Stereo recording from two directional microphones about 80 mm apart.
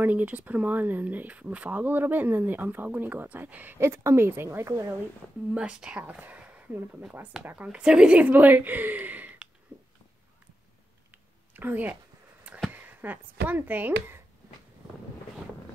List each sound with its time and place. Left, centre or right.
0.0 s speech: right
5.5 s speech: centre
11.5 s a woman's voice: right